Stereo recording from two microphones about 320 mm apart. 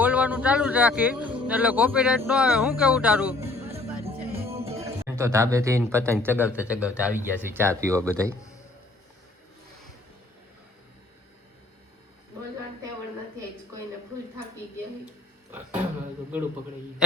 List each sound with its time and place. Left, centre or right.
0.0 s speech: centre
3.5 s music: centre
5.0 s speech: centre